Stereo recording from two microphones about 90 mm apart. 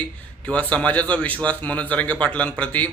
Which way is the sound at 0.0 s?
15° left (ahead or behind).